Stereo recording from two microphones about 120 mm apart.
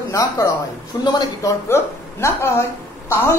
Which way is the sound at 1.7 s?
20° left (ahead or behind).